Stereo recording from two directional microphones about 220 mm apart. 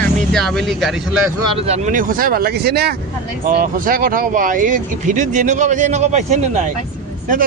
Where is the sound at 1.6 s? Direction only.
30° right (ahead or behind).